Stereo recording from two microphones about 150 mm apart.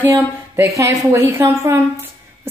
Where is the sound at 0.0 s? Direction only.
15° right (ahead or behind).